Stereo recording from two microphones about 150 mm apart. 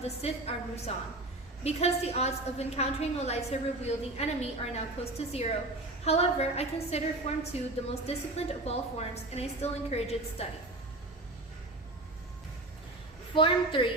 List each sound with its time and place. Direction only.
0.2 s a woman's voice: 40° left (ahead or behind)
13.3 s a woman's voice: 35° left (ahead or behind)